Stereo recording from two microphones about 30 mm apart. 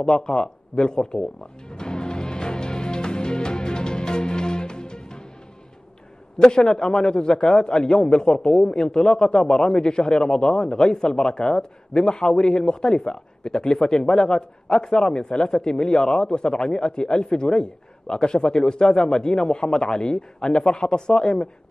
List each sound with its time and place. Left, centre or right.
0.0 s a man's voice: left
1.7 s music: left
6.4 s a man's voice: left